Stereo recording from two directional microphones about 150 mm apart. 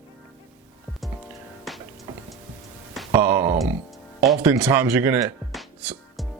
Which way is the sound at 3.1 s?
20° right (ahead or behind).